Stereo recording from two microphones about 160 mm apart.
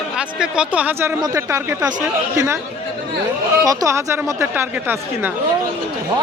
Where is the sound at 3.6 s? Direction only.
20° right (ahead or behind).